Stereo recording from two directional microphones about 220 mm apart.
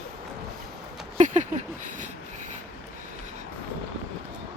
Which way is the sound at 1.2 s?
35° right (ahead or behind).